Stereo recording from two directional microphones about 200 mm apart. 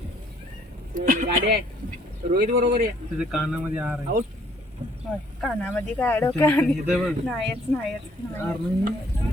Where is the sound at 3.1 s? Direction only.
5° right (ahead or behind).